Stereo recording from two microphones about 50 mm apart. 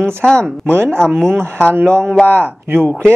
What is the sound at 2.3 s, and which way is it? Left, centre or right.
Speech, right.